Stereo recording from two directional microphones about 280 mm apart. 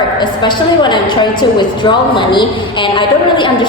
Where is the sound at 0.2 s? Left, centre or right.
Centre.